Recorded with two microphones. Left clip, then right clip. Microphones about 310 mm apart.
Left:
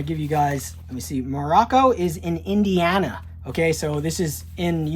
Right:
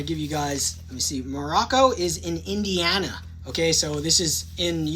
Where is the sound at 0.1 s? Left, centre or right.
Centre.